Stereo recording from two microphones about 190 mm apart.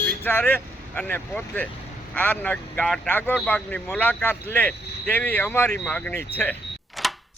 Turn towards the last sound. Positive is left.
turn(degrees=0)  # may be behind; listen again after turning